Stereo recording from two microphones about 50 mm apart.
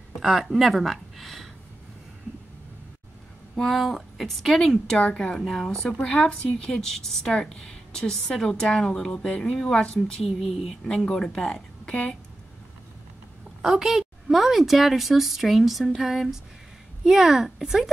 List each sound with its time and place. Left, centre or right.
0.2 s a woman's voice: centre
3.5 s a woman's voice: centre
5.4 s a woman's voice: centre
6.0 s speech: centre
13.6 s a woman's voice: centre